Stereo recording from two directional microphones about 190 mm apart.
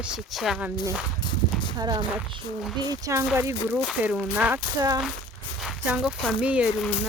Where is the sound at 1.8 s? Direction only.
20° right (ahead or behind).